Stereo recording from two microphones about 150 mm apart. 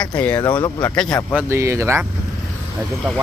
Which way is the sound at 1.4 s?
20° right (ahead or behind).